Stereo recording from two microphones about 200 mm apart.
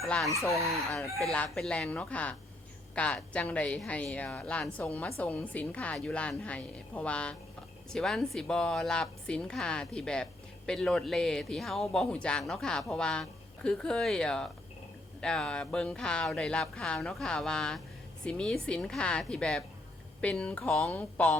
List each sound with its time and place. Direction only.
0.0 s chicken: centre (ahead or behind)
0.9 s speech: centre (ahead or behind)